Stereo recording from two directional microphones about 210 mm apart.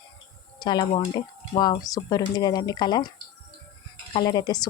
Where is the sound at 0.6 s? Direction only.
20° left (ahead or behind).